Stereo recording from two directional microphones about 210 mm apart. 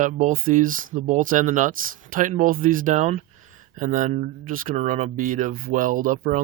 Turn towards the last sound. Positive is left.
turn(degrees=-40)  # may be behind; listen again after turning